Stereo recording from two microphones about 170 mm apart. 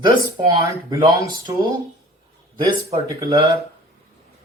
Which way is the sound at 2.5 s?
20° right (ahead or behind).